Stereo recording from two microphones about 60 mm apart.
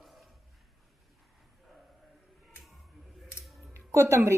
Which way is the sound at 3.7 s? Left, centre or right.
Right.